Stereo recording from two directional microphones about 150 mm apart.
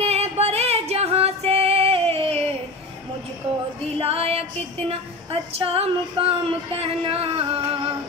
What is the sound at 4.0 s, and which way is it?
Female singing, 40° right (ahead or behind).